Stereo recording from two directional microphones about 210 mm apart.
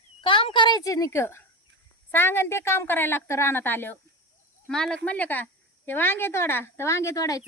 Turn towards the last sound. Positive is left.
turn(degrees=15)  # may be behind; listen again after turning